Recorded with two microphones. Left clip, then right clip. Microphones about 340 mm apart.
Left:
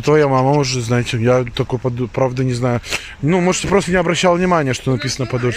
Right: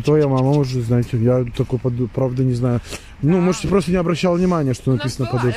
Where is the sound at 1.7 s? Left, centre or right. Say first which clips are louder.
Left 2 dB; left.